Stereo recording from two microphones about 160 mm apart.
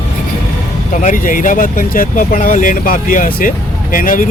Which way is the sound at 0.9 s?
55° left (ahead or behind).